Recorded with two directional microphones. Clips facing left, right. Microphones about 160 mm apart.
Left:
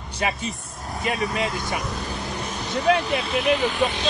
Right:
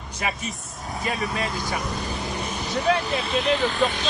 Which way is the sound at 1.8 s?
Centre (ahead or behind).